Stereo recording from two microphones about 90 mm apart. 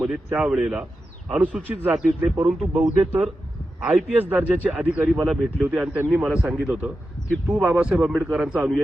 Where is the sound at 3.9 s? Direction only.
20° right (ahead or behind).